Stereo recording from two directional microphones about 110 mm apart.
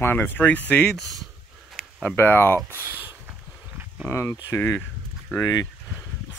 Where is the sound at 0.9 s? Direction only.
Centre (ahead or behind).